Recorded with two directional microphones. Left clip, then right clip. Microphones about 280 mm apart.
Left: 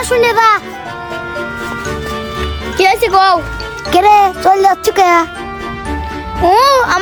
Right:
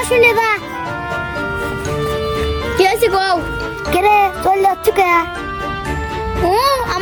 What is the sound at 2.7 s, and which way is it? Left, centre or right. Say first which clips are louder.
Speech: left 4 dB; centre.